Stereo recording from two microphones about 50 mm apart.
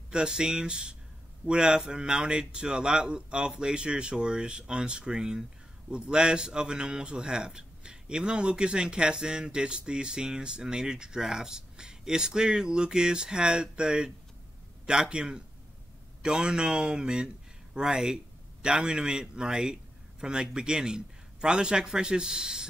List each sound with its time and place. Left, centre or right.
0.1 s a man's voice: centre